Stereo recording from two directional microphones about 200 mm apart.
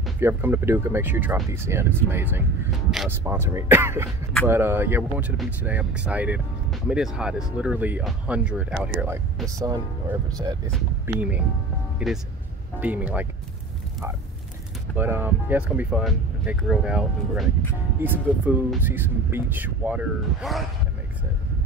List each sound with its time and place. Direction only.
0.2 s speech: 10° right (ahead or behind)
10.7 s speech: 5° right (ahead or behind)
12.8 s speech: 10° right (ahead or behind)
15.0 s speech: 10° right (ahead or behind)